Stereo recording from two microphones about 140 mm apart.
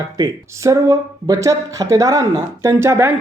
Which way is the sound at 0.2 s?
25° right (ahead or behind).